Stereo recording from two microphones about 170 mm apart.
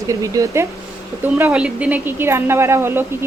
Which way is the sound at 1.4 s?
5° right (ahead or behind).